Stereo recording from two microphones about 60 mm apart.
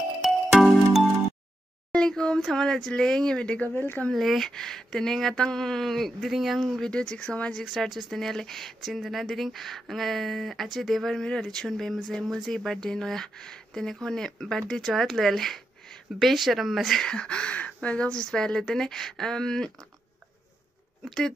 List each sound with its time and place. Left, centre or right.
0.2 s music: centre
1.9 s speech: centre
3.7 s speech: left
4.1 s speech: centre
6.6 s speech: centre
7.5 s speech: centre
17.0 s speech: centre
21.0 s speech: centre